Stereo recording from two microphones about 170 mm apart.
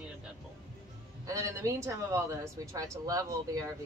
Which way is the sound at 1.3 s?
20° right (ahead or behind).